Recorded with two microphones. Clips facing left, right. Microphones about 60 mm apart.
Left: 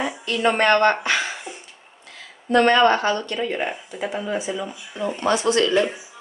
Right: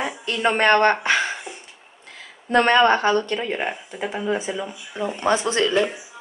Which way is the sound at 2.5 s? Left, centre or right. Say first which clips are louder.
Even; right.